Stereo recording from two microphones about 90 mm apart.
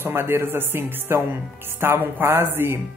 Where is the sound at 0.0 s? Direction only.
25° right (ahead or behind).